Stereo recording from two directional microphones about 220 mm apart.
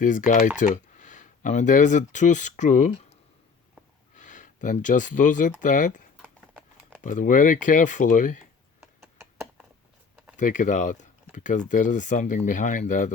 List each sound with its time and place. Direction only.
0.0 s speech: 35° left (ahead or behind)
4.2 s speech: 35° left (ahead or behind)
7.0 s speech: 35° left (ahead or behind)
8.8 s a sound: 10° right (ahead or behind)
10.3 s speech: 35° left (ahead or behind)